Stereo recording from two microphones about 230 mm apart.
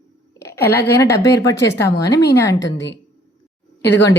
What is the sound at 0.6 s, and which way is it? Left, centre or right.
Speech, left.